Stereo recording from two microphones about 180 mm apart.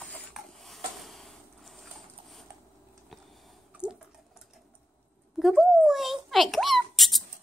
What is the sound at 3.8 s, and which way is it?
Water, 5° right (ahead or behind).